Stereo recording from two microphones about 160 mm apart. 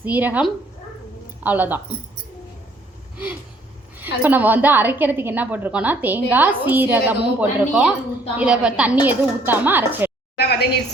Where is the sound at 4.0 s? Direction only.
10° right (ahead or behind).